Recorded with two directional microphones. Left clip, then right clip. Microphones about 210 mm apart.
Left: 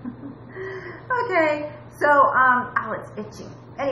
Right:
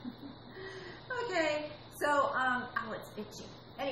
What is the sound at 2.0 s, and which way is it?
A woman's voice, 20° right (ahead or behind).